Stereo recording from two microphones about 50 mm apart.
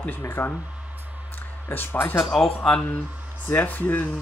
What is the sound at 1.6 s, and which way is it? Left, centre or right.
Speech, left.